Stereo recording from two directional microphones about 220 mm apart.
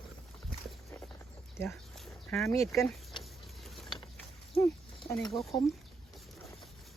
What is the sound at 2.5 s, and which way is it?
Speech, 15° left (ahead or behind).